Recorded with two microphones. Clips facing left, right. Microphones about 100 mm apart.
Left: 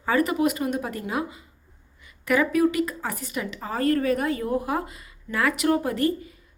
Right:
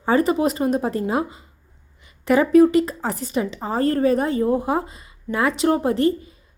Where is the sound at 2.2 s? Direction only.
30° right (ahead or behind).